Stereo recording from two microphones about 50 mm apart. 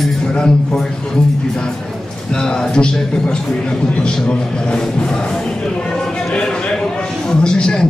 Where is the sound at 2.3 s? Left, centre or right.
Centre.